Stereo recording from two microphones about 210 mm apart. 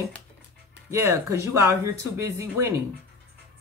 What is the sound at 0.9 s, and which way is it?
Speech, 10° right (ahead or behind).